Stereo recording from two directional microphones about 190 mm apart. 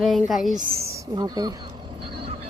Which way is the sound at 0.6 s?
20° right (ahead or behind).